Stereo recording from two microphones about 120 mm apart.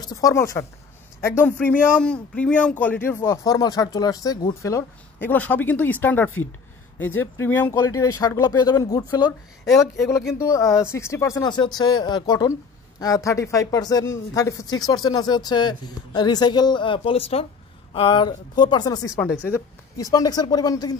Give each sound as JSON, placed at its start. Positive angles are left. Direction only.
{"t": 0.0, "sound": "speech", "side_deg": 30}
{"t": 1.7, "sound": "speech", "side_deg": 10}
{"t": 3.2, "sound": "speech", "side_deg": 30}
{"t": 5.3, "sound": "speech", "side_deg": 15}